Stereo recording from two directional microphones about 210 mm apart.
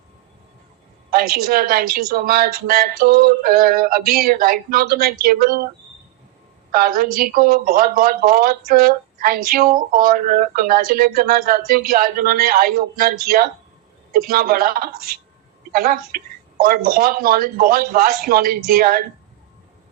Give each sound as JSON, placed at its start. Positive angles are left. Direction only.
{"t": 1.1, "sound": "a woman's voice", "side_deg": -45}
{"t": 6.7, "sound": "a woman's voice", "side_deg": -45}